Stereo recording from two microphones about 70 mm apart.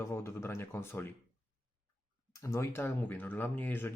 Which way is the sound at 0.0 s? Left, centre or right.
Left.